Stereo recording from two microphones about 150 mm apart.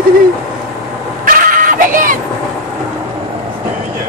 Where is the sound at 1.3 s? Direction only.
65° right (ahead or behind).